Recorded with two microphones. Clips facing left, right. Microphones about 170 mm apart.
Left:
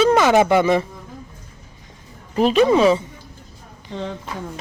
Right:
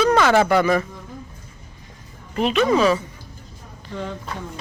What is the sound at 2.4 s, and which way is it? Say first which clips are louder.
Speech: left 3 dB; 35° left (ahead or behind).